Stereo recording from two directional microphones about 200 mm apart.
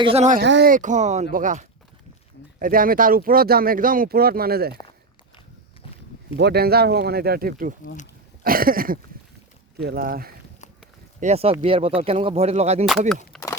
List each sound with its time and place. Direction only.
0.0 s speech: 30° right (ahead or behind)
0.4 s speech: 65° right (ahead or behind)
0.7 s speech: 40° right (ahead or behind)
6.3 s speech: 55° right (ahead or behind)
11.2 s speech: 30° right (ahead or behind)
13.3 s a sound: centre (ahead or behind)